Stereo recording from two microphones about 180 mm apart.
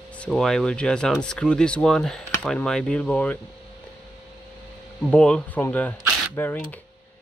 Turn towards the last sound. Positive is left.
turn(degrees=10)  # may be behind; listen again after turning